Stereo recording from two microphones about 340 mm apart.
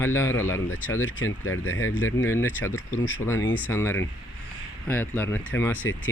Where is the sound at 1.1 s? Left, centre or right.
Left.